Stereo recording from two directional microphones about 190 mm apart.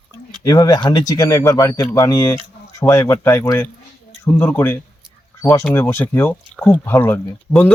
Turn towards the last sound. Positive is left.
turn(degrees=10)  # may be behind; listen again after turning